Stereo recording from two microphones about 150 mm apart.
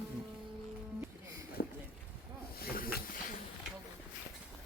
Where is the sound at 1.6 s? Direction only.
75° left (ahead or behind).